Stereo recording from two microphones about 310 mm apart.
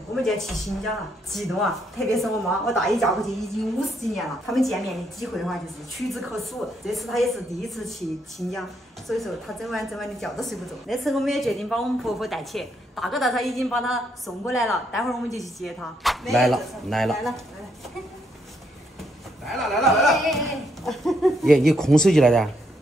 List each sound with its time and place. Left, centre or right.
0.1 s a woman's voice: centre
19.4 s a woman's voice: centre